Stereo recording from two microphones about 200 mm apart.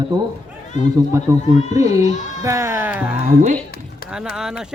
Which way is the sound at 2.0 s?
35° left (ahead or behind).